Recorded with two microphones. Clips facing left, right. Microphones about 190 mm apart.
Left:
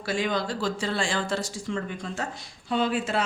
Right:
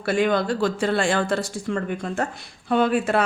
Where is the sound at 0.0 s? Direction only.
60° right (ahead or behind).